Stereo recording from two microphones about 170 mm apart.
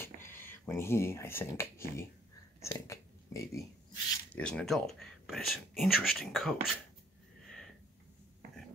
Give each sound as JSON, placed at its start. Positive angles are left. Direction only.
{"t": 0.0, "sound": "speech", "side_deg": 15}
{"t": 4.4, "sound": "speech", "side_deg": 5}
{"t": 7.4, "sound": "sniff", "side_deg": 0}